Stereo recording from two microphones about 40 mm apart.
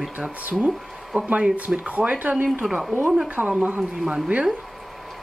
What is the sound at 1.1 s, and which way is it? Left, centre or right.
Speech, right.